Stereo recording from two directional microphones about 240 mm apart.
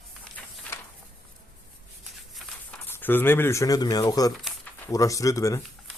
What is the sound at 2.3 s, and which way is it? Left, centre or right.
Speech, centre.